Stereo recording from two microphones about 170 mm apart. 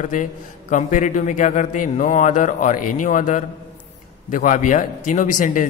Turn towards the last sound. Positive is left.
turn(degrees=50)  # may be behind; listen again after turning